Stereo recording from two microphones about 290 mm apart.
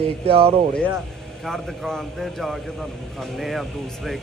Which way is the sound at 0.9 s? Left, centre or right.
Centre.